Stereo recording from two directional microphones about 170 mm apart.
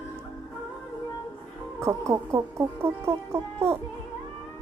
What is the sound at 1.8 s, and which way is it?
Speech, 15° right (ahead or behind).